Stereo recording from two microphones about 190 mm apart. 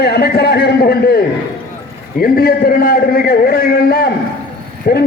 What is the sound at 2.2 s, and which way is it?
A man's voice, 50° left (ahead or behind).